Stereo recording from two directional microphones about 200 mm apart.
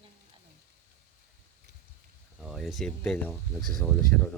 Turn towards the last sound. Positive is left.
turn(degrees=5)  # may be behind; listen again after turning